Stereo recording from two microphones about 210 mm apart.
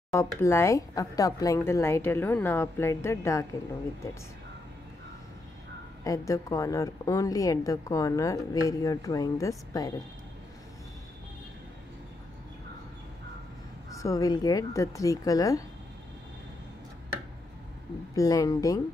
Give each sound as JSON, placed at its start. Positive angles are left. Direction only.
{"t": 0.1, "sound": "a woman's voice", "side_deg": 15}
{"t": 6.0, "sound": "a woman's voice", "side_deg": 15}
{"t": 13.9, "sound": "a woman's voice", "side_deg": 15}
{"t": 18.1, "sound": "a woman's voice", "side_deg": 15}